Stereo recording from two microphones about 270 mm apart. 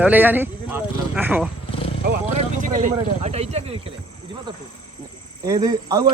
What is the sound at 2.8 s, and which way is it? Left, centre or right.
Speech, right.